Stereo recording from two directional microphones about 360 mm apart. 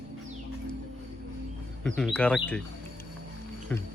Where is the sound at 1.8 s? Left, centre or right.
Centre.